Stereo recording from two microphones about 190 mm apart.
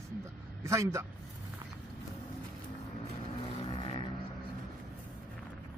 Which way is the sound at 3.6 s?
30° left (ahead or behind).